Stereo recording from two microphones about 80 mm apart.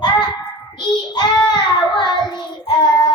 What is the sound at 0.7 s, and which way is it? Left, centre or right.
Child singing, left.